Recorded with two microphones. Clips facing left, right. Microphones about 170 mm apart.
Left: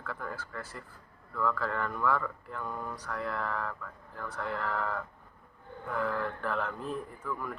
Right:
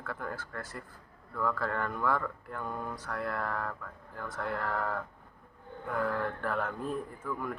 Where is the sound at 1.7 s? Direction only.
50° right (ahead or behind).